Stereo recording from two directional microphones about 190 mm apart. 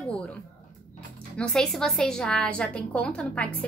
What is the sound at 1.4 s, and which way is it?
A woman's voice, 5° left (ahead or behind).